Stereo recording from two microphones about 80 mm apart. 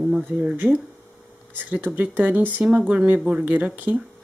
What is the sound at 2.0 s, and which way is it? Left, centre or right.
Speech, centre.